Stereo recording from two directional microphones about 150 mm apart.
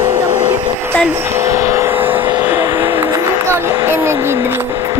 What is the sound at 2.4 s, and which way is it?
Music, 15° right (ahead or behind).